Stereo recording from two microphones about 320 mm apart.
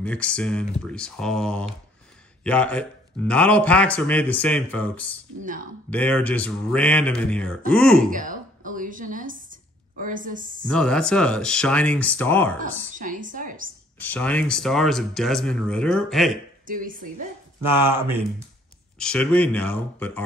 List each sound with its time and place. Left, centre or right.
0.0 s speech: centre
5.4 s speech: right
5.9 s speech: centre
8.1 s a woman's voice: right
10.7 s speech: centre
12.5 s speech: right
13.9 s speech: centre
16.6 s speech: right
17.8 s speech: centre
18.9 s speech: centre